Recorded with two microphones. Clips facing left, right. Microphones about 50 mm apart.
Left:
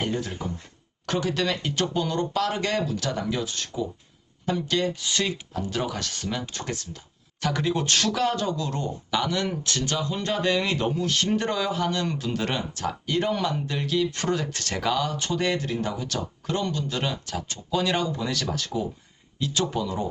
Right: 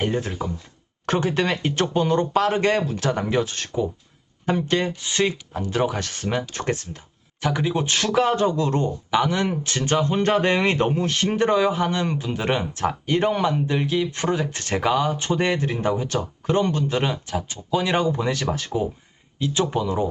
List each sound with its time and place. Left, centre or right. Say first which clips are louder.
0.0 s speech: right 4 dB; right
7.4 s speech: right 2 dB; centre